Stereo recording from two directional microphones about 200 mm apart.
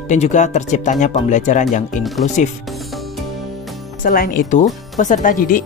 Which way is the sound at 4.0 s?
40° left (ahead or behind).